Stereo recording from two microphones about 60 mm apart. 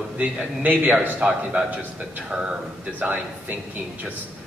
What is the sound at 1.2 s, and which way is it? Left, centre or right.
A man's voice, centre.